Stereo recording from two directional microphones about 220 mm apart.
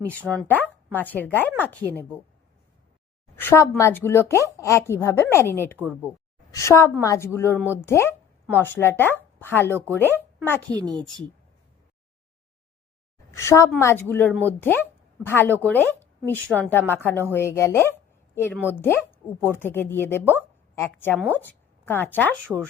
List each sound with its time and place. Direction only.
0.4 s speech: 10° left (ahead or behind)
3.3 s a woman's voice: 10° left (ahead or behind)
7.6 s speech: 10° right (ahead or behind)
7.9 s speech: 10° left (ahead or behind)
10.8 s a woman's voice: 20° right (ahead or behind)
13.3 s a woman's voice: 15° left (ahead or behind)